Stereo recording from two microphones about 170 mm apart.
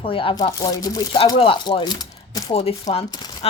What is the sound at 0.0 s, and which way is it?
A woman's voice, 30° left (ahead or behind).